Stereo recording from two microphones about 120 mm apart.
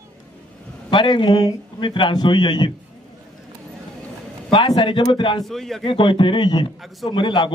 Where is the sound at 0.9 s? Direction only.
40° left (ahead or behind).